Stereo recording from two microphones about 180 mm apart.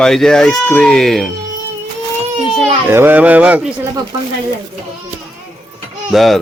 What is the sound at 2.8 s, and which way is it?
Speech, 10° right (ahead or behind).